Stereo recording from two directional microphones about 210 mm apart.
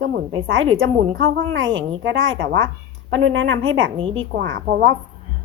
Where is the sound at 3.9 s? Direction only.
25° right (ahead or behind).